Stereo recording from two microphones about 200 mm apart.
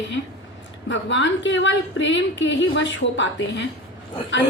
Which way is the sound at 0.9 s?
65° left (ahead or behind).